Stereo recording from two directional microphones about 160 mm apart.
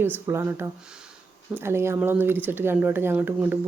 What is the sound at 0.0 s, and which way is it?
Speech, 15° right (ahead or behind).